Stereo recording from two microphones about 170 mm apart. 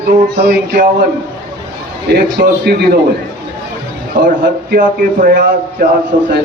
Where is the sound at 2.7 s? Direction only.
70° right (ahead or behind).